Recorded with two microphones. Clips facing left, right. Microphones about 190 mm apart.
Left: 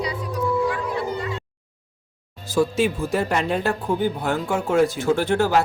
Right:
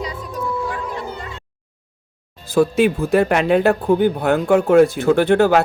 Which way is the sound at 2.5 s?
60° right (ahead or behind).